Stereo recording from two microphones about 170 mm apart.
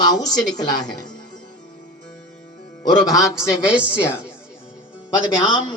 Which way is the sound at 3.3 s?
15° left (ahead or behind).